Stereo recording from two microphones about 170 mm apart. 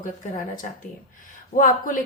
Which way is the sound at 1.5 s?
50° left (ahead or behind).